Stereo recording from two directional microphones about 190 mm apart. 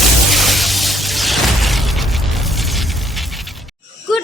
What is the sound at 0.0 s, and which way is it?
Music, centre (ahead or behind).